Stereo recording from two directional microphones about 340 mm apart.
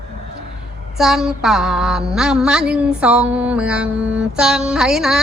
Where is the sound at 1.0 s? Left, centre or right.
Centre.